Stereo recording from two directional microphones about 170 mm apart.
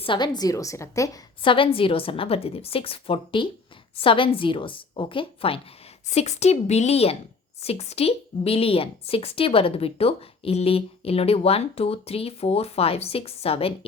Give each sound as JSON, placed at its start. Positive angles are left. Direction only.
{"t": 0.0, "sound": "a woman's voice", "side_deg": 25}
{"t": 1.4, "sound": "a woman's voice", "side_deg": 30}
{"t": 6.1, "sound": "a woman's voice", "side_deg": 40}